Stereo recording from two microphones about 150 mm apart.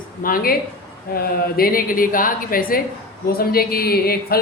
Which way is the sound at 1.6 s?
70° left (ahead or behind).